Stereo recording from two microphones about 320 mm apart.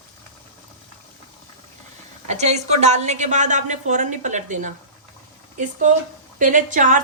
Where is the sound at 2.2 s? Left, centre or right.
Right.